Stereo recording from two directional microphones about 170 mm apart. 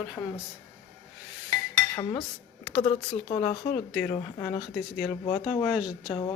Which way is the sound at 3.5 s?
40° left (ahead or behind).